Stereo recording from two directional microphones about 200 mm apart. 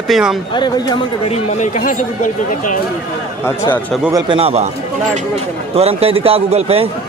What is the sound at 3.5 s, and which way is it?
Speech, 10° left (ahead or behind).